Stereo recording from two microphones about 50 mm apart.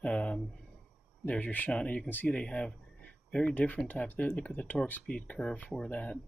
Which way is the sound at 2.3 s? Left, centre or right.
Left.